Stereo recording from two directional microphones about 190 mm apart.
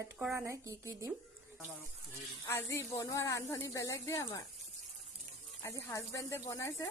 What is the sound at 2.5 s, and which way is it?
Speech, 15° left (ahead or behind).